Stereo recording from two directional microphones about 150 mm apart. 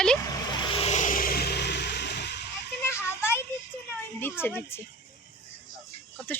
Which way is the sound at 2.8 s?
15° left (ahead or behind).